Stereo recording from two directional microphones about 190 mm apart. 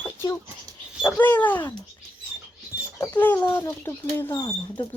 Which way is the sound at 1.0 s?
10° left (ahead or behind).